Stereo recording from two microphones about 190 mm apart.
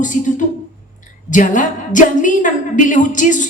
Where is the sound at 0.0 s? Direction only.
40° left (ahead or behind).